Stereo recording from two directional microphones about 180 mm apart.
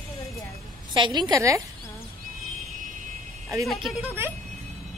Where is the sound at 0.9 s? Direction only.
25° right (ahead or behind).